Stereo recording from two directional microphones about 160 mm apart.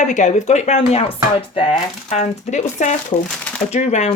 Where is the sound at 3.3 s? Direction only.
5° left (ahead or behind).